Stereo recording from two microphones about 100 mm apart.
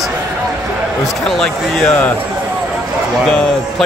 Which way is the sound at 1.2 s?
5° left (ahead or behind).